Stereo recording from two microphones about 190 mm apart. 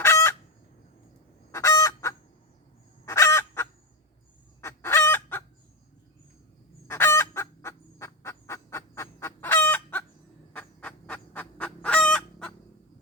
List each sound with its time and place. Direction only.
0.0 s chicken: 15° left (ahead or behind)
1.5 s fowl: 15° left (ahead or behind)
4.6 s chicken: 15° left (ahead or behind)
6.8 s fowl: 15° left (ahead or behind)